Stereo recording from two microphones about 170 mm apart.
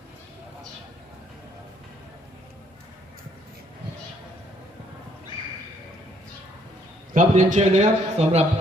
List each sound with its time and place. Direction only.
7.1 s a man's voice: 45° right (ahead or behind)